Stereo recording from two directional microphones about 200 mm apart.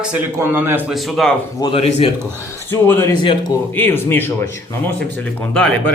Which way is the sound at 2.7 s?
10° left (ahead or behind).